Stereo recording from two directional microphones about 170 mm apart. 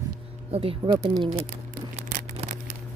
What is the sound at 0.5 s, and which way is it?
Speech, 35° right (ahead or behind).